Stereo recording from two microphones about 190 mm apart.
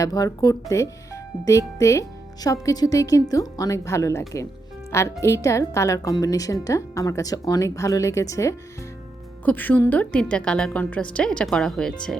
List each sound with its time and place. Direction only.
0.0 s a woman's voice: 20° left (ahead or behind)